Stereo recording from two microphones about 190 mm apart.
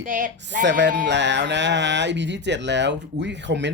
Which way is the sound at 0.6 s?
70° right (ahead or behind).